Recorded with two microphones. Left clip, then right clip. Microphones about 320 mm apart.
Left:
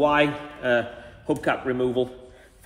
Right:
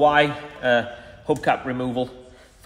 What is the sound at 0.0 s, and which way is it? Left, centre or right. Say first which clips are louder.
A man's voice: right 3 dB; right.